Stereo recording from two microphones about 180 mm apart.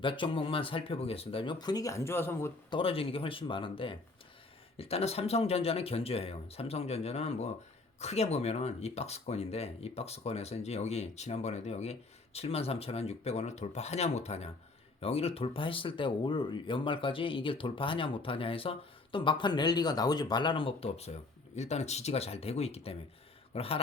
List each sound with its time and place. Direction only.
0.0 s speech: 30° left (ahead or behind); by 2.5 s 15° left (ahead or behind)
2.6 s speech: 30° left (ahead or behind)